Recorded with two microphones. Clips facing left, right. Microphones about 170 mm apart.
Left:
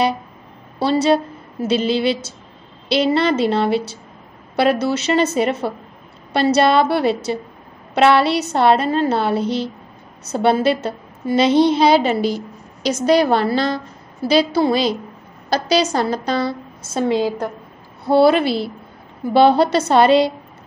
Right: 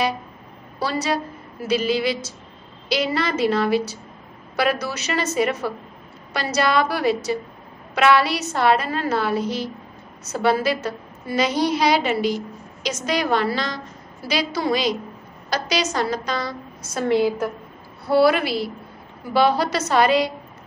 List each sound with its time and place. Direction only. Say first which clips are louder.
0.7 s a woman's voice: left 8 dB; 25° left (ahead or behind)
17.0 s a woman's voice: left 1 dB; 15° left (ahead or behind)